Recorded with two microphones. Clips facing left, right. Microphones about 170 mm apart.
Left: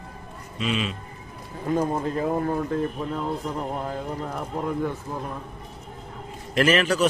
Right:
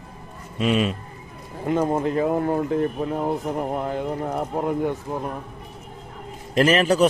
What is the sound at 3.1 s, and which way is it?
Speech, 50° right (ahead or behind).